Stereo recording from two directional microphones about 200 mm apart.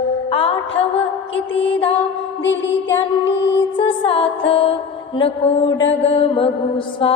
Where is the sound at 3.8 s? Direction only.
25° left (ahead or behind).